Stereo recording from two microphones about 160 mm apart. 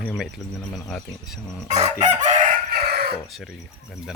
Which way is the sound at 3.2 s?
Centre (ahead or behind).